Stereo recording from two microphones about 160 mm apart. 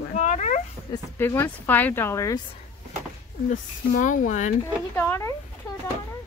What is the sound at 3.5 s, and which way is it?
Speech, 55° left (ahead or behind).